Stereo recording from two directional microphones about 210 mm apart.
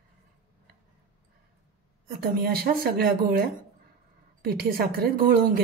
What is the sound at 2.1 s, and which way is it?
Speech, 45° right (ahead or behind).